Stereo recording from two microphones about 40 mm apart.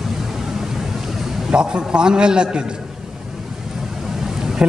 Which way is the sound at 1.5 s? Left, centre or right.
Right.